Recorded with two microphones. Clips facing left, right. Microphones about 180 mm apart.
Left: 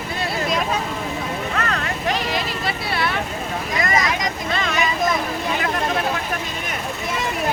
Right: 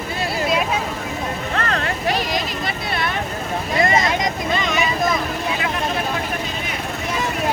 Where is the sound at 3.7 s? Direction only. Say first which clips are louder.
Right 4 dB; 25° right (ahead or behind).